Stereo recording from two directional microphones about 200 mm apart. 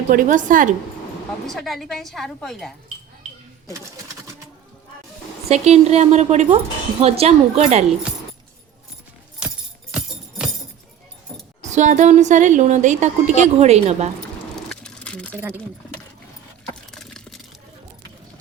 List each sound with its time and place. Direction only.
0.1 s a woman's voice: 40° right (ahead or behind)
1.5 s a woman's voice: centre (ahead or behind)
5.5 s a woman's voice: 35° right (ahead or behind)
9.9 s music: 5° right (ahead or behind)
11.6 s a woman's voice: 35° right (ahead or behind)
14.5 s a sound: 5° left (ahead or behind)
15.4 s speech: 10° right (ahead or behind)
16.9 s a sound: centre (ahead or behind)